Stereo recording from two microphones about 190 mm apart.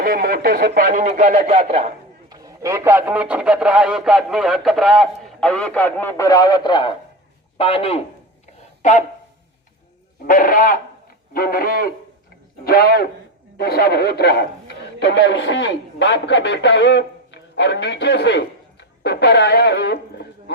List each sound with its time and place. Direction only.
0.0 s speech: 50° right (ahead or behind); by 1.9 s 30° right (ahead or behind)
2.3 s speech: 20° right (ahead or behind); by 8.0 s 30° left (ahead or behind)
8.8 s a sound: 40° left (ahead or behind)
10.2 s a man's voice: 50° left (ahead or behind)